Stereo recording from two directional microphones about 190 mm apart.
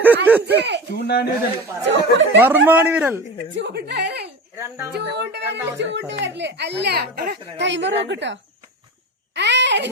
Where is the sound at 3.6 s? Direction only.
60° right (ahead or behind).